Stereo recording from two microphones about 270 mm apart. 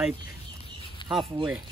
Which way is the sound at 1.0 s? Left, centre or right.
Centre.